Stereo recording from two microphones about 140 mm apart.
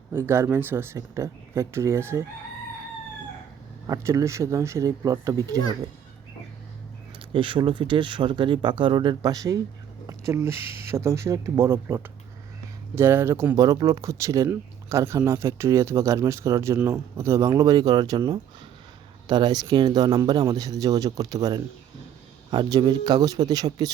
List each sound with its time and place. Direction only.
0.1 s speech: 15° right (ahead or behind)
3.8 s speech: 25° right (ahead or behind)
7.3 s speech: 35° right (ahead or behind)